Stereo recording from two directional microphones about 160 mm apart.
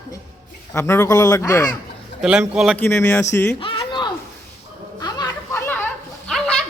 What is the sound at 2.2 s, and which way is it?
Speech, 5° right (ahead or behind).